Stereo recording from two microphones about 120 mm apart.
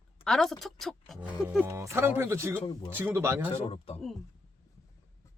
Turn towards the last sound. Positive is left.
turn(degrees=50)  # may be behind; listen again after turning